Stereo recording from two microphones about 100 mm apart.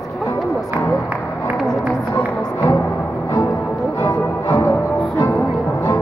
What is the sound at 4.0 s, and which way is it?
Music, 25° left (ahead or behind).